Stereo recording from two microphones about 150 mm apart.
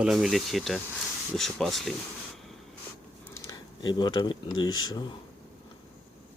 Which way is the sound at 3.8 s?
30° left (ahead or behind).